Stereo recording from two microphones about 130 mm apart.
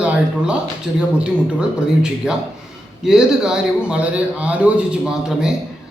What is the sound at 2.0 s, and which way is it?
A man's voice, 5° right (ahead or behind).